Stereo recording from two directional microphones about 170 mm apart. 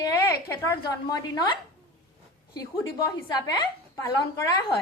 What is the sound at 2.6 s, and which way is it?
A woman's voice, 20° left (ahead or behind).